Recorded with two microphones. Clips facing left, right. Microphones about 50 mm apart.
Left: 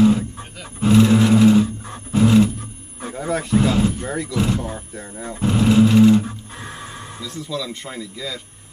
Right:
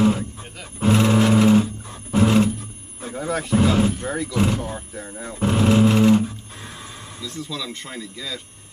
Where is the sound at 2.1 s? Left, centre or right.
Right.